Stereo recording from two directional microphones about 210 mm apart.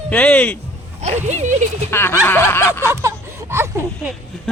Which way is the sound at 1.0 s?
30° right (ahead or behind).